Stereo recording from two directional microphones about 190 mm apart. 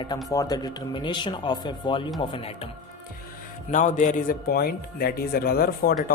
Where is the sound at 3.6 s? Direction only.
40° left (ahead or behind).